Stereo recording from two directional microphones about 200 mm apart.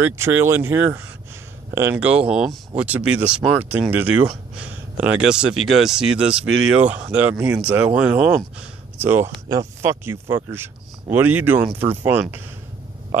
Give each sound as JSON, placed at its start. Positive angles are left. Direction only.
{"t": 0.0, "sound": "speech", "side_deg": -10}